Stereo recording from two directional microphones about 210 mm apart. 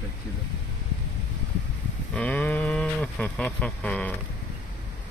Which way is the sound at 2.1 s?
10° left (ahead or behind).